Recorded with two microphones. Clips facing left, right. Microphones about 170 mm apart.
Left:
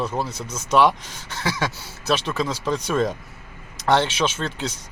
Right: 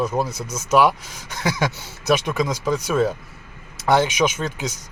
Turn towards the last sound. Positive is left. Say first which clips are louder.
# right 1 dB
turn(degrees=-10)  # may be behind; listen again after turning